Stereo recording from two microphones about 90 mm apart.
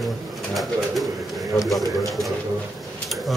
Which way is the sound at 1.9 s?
Centre (ahead or behind).